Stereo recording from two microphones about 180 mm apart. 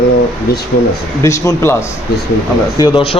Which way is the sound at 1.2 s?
15° left (ahead or behind).